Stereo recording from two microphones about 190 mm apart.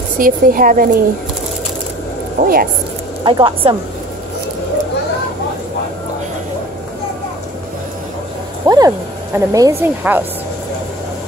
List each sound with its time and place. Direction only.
0.2 s speech: 45° right (ahead or behind)
2.4 s speech: 50° right (ahead or behind)
3.3 s speech: 25° right (ahead or behind)
8.6 s speech: 20° right (ahead or behind)